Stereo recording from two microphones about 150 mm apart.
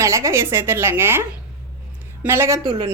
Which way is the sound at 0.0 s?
20° right (ahead or behind).